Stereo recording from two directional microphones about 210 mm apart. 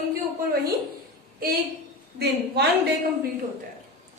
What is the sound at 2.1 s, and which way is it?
Speech, 50° right (ahead or behind).